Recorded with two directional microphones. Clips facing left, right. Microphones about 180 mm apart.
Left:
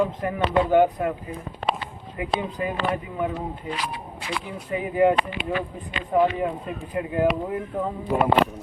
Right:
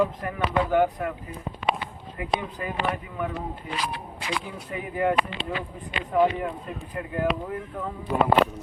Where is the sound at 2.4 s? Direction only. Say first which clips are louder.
Left 5 dB; 20° left (ahead or behind).